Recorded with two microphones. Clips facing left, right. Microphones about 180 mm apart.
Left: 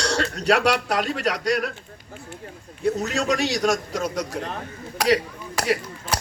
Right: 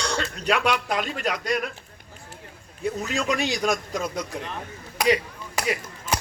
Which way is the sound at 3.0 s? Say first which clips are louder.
Left 2 dB; 40° left (ahead or behind).